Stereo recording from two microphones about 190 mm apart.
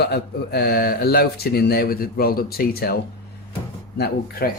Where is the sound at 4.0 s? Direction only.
55° left (ahead or behind).